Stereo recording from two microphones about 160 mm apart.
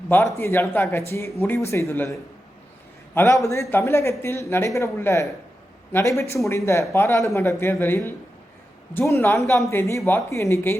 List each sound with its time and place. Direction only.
0.1 s speech: 15° left (ahead or behind)
3.2 s a man's voice: 20° left (ahead or behind)